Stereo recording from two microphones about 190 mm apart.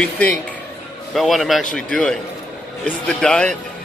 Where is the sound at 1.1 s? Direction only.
Centre (ahead or behind).